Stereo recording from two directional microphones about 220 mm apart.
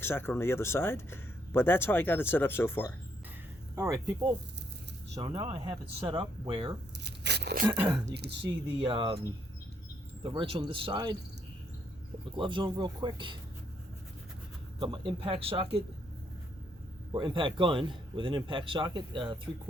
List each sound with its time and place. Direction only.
0.0 s speech: 10° left (ahead or behind)
3.8 s speech: 15° right (ahead or behind)
5.1 s speech: 25° right (ahead or behind)
7.0 s a sound: 50° right (ahead or behind)
7.6 s speech: 20° right (ahead or behind)
10.2 s speech: 25° right (ahead or behind)
12.4 s speech: 20° right (ahead or behind)
14.8 s speech: 20° right (ahead or behind)
17.1 s speech: 20° right (ahead or behind)